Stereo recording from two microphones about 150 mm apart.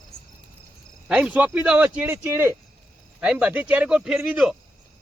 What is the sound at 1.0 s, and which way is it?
Speech, 10° right (ahead or behind).